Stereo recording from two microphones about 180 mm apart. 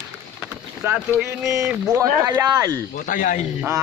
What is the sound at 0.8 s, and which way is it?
Speech, 10° right (ahead or behind).